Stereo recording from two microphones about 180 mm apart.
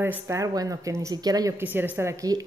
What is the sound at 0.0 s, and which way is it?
A woman's voice, 15° right (ahead or behind).